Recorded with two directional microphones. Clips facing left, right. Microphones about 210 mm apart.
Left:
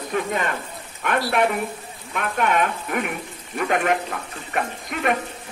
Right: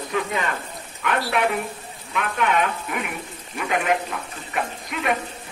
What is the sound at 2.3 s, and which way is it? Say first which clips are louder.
Speech: left 1 dB; 50° left (ahead or behind).